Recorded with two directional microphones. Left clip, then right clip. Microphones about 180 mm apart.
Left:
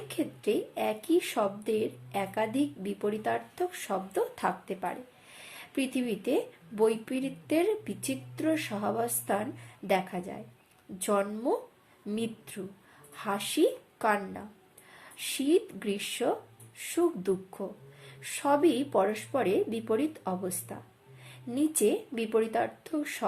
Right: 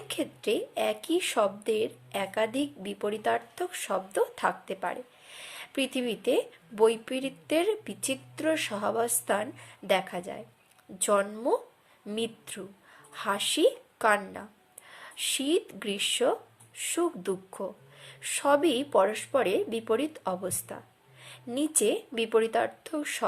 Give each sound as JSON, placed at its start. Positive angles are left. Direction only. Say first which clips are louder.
{"t": 0.1, "sound": "a woman's voice", "louder": "right 1 dB", "side_deg": -30}